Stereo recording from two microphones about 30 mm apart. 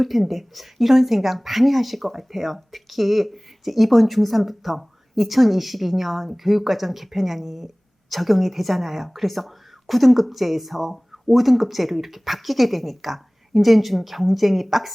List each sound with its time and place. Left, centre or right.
0.0 s speech: centre